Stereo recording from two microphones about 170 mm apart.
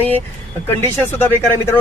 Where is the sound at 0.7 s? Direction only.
15° left (ahead or behind).